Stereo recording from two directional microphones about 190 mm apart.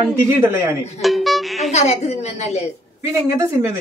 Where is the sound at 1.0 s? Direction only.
Centre (ahead or behind).